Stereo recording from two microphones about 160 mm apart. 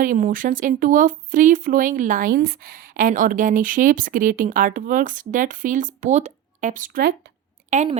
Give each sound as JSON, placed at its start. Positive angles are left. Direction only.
{"t": 0.0, "sound": "speech", "side_deg": -55}
{"t": 7.7, "sound": "a woman's voice", "side_deg": -50}